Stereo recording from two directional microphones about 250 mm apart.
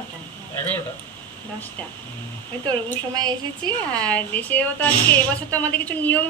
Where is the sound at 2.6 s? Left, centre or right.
Centre.